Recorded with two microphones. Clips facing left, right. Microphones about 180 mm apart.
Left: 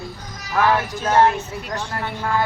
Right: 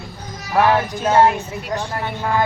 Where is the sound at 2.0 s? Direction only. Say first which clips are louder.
Right 2 dB; 20° right (ahead or behind).